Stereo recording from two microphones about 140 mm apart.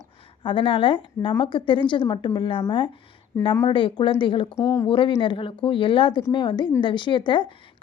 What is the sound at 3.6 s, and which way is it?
Speech, 35° left (ahead or behind).